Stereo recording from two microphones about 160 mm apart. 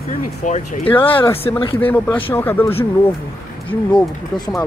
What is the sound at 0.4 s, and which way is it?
Speech, 50° left (ahead or behind).